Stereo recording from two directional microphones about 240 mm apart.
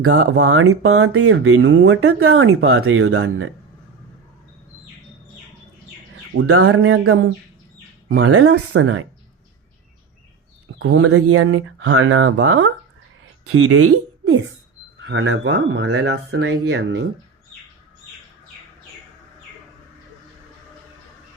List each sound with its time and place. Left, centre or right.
0.0 s speech: right
6.3 s speech: right
8.2 s speech: right
10.8 s speech: right
15.0 s speech: right